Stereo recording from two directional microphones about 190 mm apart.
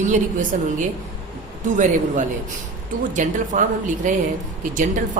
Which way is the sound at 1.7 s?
40° right (ahead or behind).